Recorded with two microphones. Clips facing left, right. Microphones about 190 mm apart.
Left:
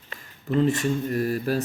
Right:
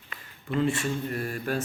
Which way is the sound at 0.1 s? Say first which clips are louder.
Left 5 dB; 40° left (ahead or behind).